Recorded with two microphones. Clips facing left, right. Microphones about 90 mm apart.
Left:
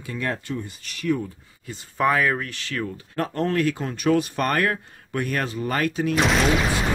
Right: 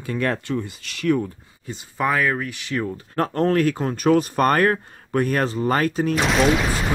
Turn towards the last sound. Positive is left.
turn(degrees=0)  # may be behind; listen again after turning